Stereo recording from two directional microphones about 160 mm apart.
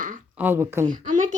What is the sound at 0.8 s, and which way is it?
Speech, 55° right (ahead or behind).